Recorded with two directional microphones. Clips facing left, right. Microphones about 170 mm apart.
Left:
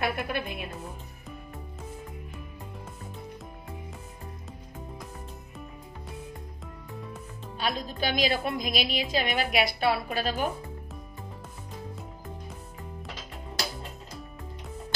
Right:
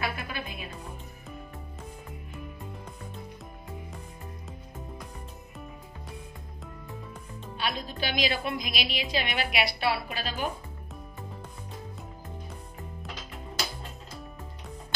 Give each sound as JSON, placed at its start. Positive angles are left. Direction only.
{"t": 0.0, "sound": "music", "side_deg": 55}
{"t": 7.5, "sound": "a woman's voice", "side_deg": 40}